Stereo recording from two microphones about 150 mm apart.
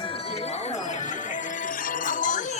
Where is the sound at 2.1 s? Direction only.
60° left (ahead or behind).